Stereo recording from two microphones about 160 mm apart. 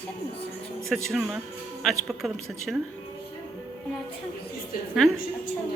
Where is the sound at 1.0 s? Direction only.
Centre (ahead or behind).